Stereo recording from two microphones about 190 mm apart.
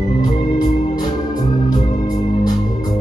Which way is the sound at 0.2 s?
20° left (ahead or behind).